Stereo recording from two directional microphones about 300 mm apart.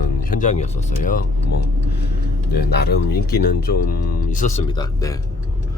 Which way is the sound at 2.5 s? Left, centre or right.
Left.